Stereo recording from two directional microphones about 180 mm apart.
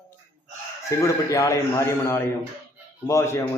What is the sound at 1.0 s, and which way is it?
A man's voice, 15° left (ahead or behind).